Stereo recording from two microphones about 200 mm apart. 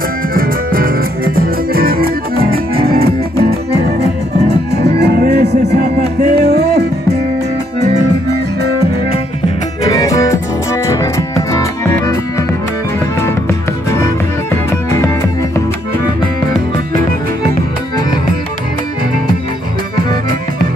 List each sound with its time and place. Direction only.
0.3 s music: 45° right (ahead or behind)
4.8 s music: 55° right (ahead or behind)
9.8 s music: 15° left (ahead or behind)
13.9 s music: 15° left (ahead or behind)